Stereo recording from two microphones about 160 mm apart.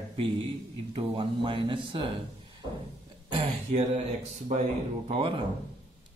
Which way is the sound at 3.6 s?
45° right (ahead or behind).